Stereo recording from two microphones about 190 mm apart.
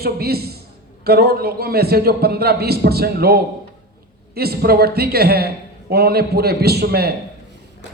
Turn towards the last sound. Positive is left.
turn(degrees=-55)  # may be behind; listen again after turning